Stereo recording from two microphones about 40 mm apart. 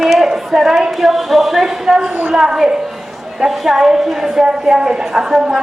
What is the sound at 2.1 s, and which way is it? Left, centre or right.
Speech, right.